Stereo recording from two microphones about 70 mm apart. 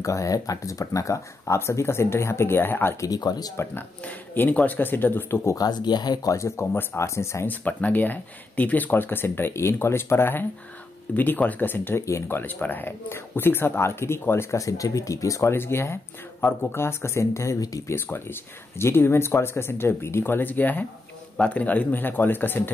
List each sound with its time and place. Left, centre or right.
0.0 s speech: left
3.1 s speech: left
4.0 s speech: left
5.6 s speech: left
6.2 s speech: left
6.6 s speech: left
7.4 s speech: left
11.1 s speech: left
12.0 s speech: left
14.6 s speech: left
15.5 s speech: left
17.9 s speech: left